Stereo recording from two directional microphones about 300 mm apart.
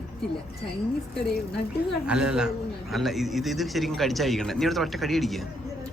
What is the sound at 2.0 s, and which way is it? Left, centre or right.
A man's voice, centre.